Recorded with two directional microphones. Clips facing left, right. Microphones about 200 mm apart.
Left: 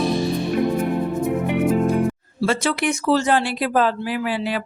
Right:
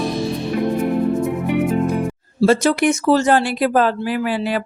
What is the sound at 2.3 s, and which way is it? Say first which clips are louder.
Speech: right 8 dB; 40° right (ahead or behind).